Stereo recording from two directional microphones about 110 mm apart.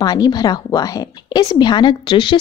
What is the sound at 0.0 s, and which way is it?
Speech, 35° left (ahead or behind).